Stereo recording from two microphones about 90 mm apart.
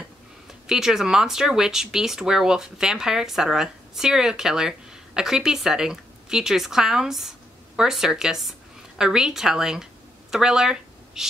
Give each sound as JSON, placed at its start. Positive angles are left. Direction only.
{"t": 0.5, "sound": "speech", "side_deg": -5}